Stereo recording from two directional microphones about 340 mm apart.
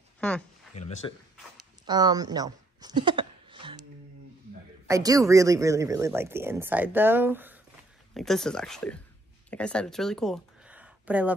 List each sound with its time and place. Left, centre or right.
0.2 s speech: centre
0.7 s speech: centre
1.9 s a sound: centre
4.8 s speech: centre